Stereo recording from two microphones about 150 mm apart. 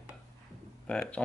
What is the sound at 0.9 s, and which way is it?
Speech, 5° left (ahead or behind).